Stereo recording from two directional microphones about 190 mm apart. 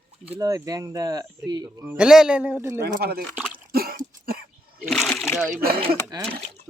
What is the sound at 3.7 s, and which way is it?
Cough, 50° right (ahead or behind).